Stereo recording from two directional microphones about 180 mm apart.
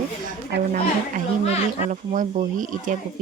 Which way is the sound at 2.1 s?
40° right (ahead or behind).